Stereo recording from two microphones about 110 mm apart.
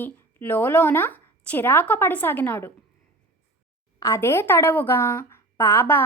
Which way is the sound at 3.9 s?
25° left (ahead or behind).